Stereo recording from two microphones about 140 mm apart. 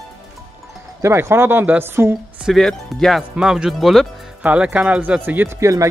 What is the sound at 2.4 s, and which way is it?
Speech, 5° left (ahead or behind).